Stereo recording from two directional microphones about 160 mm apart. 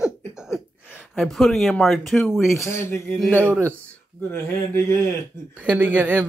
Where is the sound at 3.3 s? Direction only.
10° right (ahead or behind).